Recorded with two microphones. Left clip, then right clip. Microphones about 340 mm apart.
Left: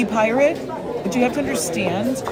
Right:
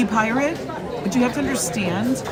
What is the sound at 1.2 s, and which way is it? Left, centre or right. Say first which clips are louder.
Speech: left 3 dB; centre.